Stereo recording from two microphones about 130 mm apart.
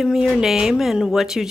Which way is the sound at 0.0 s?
5° right (ahead or behind).